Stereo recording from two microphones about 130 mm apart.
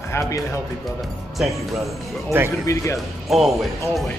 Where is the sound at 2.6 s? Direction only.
20° left (ahead or behind).